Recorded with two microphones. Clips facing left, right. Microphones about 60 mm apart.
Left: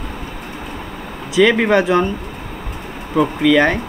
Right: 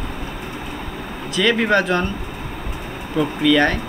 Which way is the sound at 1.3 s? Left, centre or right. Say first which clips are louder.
Left 4 dB; centre.